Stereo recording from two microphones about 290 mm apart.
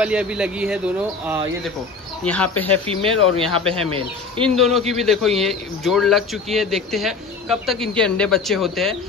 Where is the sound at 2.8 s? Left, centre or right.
Centre.